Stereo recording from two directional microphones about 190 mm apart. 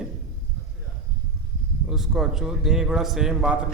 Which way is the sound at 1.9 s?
Centre (ahead or behind).